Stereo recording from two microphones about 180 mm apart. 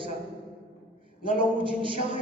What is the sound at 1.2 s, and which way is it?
Speech, 30° right (ahead or behind).